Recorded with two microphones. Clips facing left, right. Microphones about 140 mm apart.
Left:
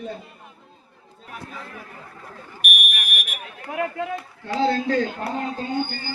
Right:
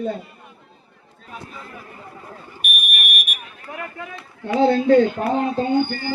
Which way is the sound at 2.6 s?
90° left.